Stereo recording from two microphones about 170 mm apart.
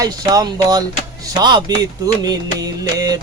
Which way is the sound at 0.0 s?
20° right (ahead or behind).